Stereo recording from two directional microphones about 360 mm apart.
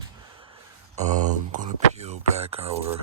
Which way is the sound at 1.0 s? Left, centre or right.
Centre.